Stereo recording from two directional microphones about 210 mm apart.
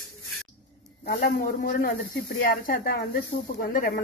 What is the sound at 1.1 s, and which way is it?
A woman's voice, 40° left (ahead or behind).